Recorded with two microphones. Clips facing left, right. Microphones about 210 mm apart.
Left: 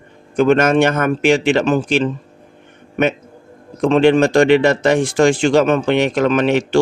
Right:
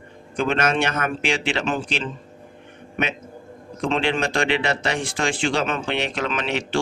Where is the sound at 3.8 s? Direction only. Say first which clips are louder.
Left 11 dB; 45° left (ahead or behind).